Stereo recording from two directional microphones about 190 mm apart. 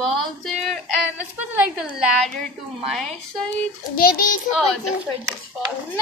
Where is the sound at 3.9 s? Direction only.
50° left (ahead or behind).